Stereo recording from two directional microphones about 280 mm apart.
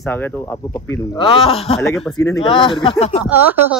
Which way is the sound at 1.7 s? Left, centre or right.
Centre.